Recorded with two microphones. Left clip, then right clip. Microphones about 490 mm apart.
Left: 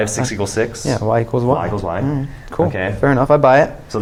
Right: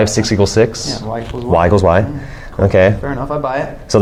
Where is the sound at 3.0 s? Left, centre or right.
Left.